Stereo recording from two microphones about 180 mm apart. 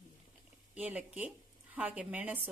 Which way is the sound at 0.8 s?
10° right (ahead or behind).